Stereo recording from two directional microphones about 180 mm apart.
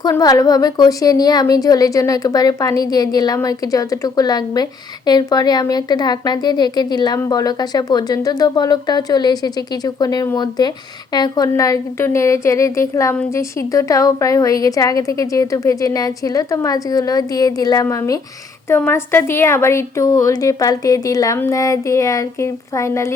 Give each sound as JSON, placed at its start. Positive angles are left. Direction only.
{"t": 0.0, "sound": "a woman's voice", "side_deg": 20}